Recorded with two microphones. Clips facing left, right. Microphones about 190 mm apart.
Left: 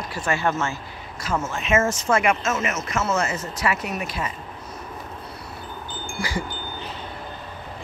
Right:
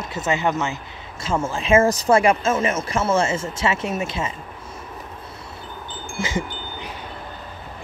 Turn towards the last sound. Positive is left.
turn(degrees=-20)  # may be behind; listen again after turning